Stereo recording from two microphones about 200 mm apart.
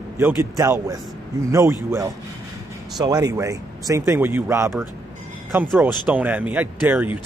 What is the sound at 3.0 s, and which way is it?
Speech, 20° right (ahead or behind).